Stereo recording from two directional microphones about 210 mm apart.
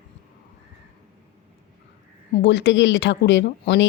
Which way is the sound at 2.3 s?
55° left (ahead or behind).